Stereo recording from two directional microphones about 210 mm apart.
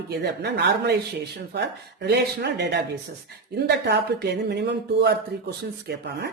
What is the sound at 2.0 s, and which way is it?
A woman's voice, 50° right (ahead or behind).